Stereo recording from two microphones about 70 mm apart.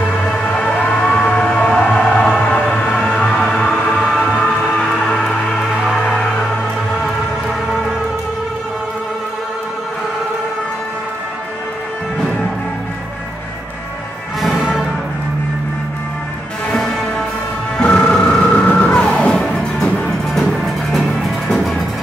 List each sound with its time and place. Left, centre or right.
0.2 s music: centre
1.0 s a sound: centre
1.4 s music: centre
4.0 s music: centre
14.4 s music: centre
16.6 s music: centre
18.4 s vehicle: centre
18.9 s music: centre